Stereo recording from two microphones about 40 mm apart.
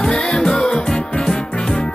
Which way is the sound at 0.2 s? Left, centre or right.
Centre.